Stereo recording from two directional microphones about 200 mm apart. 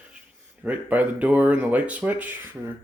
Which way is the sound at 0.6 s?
10° right (ahead or behind).